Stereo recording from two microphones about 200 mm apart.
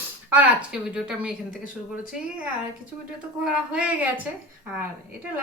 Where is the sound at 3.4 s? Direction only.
5° right (ahead or behind).